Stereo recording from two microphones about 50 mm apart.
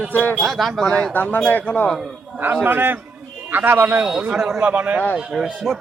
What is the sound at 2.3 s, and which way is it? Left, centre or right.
A man's voice, right.